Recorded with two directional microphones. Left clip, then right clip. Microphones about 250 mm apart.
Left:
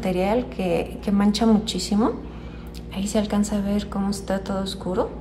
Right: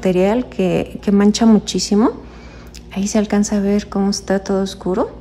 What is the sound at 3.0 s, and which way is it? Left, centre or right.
A woman's voice, right.